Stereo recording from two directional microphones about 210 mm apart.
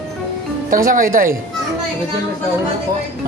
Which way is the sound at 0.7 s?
40° right (ahead or behind).